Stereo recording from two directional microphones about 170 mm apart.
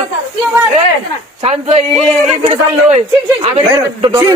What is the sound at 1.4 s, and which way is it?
Speech, 40° right (ahead or behind).